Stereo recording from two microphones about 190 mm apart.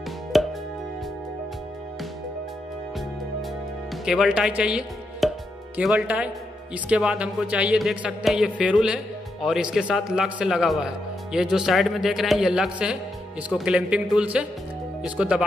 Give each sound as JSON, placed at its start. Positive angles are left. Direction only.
{"t": 0.3, "sound": "music", "side_deg": 0}
{"t": 3.9, "sound": "speech", "side_deg": 0}